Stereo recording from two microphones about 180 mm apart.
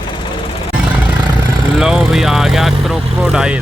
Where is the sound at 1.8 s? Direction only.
5° right (ahead or behind).